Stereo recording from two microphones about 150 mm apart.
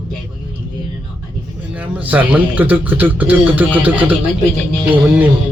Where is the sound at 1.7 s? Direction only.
10° right (ahead or behind).